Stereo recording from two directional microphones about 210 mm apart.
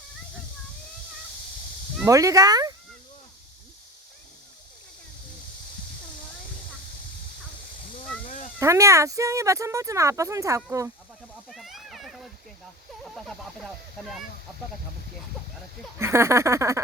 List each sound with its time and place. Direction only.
2.0 s speech: 15° right (ahead or behind)
8.5 s speech: 15° right (ahead or behind)
11.4 s a sound: centre (ahead or behind)
13.1 s speech: centre (ahead or behind)
16.0 s speech: 10° right (ahead or behind)